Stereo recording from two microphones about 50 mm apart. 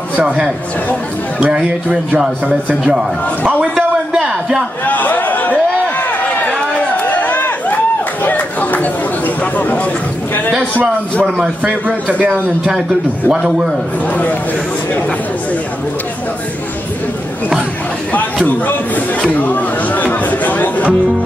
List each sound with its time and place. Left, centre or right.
1.4 s speech: centre
4.1 s a sound: centre
4.8 s a sound: left
8.2 s chatter: left
9.6 s speech: left
11.6 s a man's voice: right
18.1 s speech: left